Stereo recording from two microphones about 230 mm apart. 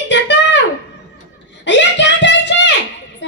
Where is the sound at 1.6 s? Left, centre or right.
Left.